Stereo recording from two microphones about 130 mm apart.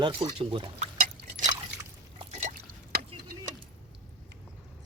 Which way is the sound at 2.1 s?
65° right (ahead or behind).